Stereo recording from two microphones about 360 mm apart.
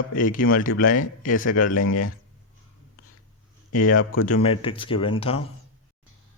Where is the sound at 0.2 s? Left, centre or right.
Left.